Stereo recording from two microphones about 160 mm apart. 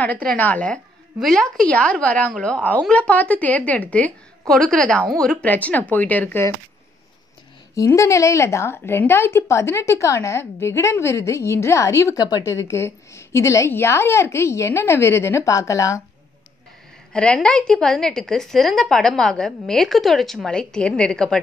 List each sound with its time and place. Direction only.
0.0 s a woman's voice: 10° left (ahead or behind)
7.7 s a woman's voice: 20° left (ahead or behind)
17.1 s a woman's voice: 5° left (ahead or behind)